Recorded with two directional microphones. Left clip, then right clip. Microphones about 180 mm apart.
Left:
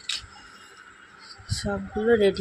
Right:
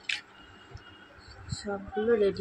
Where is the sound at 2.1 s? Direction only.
30° left (ahead or behind).